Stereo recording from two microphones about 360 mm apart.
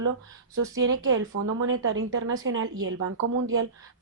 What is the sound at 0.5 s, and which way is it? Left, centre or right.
A woman's voice, right.